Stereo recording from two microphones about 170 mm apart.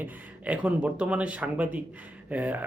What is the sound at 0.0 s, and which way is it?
Speech, 10° right (ahead or behind).